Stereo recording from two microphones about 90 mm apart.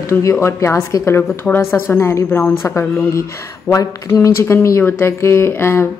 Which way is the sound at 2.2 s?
20° left (ahead or behind).